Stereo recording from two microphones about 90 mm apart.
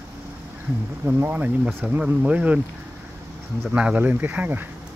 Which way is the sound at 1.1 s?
20° right (ahead or behind).